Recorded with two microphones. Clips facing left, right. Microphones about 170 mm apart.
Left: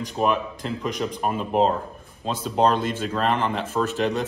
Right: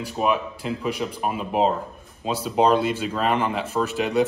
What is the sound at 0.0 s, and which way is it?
Speech, 5° right (ahead or behind).